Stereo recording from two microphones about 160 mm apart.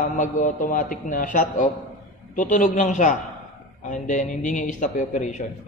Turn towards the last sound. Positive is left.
turn(degrees=50)  # may be behind; listen again after turning